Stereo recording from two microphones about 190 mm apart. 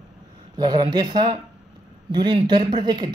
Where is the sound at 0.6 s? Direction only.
25° right (ahead or behind).